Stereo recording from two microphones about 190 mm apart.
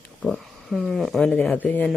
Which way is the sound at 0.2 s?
Centre (ahead or behind).